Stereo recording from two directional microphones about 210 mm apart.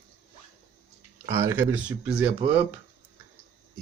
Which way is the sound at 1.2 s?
15° right (ahead or behind).